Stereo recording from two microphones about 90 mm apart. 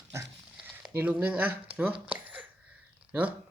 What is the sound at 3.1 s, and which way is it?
Speech, 15° right (ahead or behind).